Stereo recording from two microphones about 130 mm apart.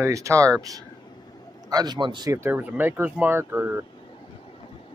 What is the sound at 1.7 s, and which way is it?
Speech, 35° right (ahead or behind).